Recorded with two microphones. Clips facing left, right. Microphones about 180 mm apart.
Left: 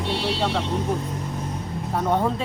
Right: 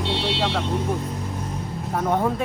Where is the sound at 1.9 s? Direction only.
Centre (ahead or behind).